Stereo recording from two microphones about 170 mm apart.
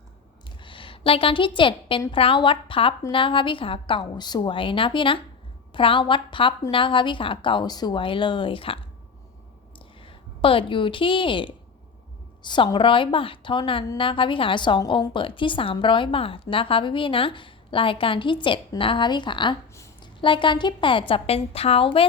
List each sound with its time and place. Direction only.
0.6 s a woman's voice: 30° left (ahead or behind)
19.7 s a sound: 15° left (ahead or behind)
20.2 s a woman's voice: 30° left (ahead or behind)